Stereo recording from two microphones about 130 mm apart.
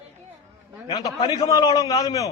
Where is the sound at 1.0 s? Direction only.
25° left (ahead or behind).